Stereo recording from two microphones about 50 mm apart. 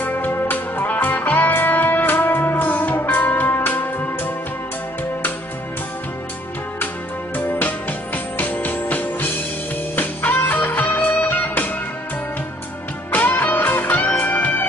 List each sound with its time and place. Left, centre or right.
0.0 s music: left
7.3 s music: left
13.1 s music: left